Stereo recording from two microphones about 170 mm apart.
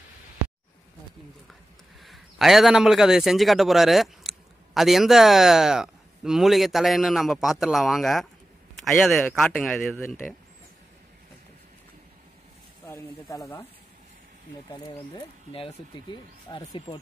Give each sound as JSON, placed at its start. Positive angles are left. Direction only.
{"t": 2.0, "sound": "a man's voice", "side_deg": 0}
{"t": 12.8, "sound": "speech", "side_deg": 15}
{"t": 14.7, "sound": "speech", "side_deg": 30}